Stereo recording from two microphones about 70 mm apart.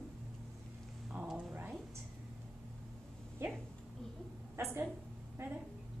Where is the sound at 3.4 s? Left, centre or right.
Right.